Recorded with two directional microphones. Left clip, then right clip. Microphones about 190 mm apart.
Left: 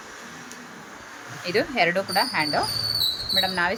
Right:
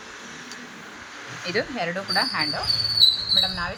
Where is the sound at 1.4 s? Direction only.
70° left (ahead or behind).